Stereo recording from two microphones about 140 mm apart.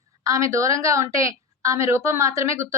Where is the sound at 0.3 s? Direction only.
20° right (ahead or behind).